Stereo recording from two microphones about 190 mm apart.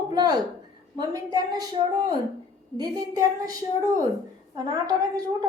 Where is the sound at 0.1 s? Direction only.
20° right (ahead or behind).